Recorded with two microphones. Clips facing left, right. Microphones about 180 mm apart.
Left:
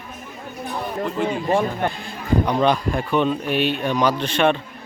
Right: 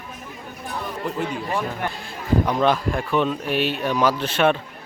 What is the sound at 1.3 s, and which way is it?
Speech, 40° left (ahead or behind).